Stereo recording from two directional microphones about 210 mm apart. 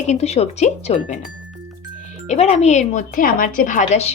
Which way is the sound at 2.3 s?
30° left (ahead or behind).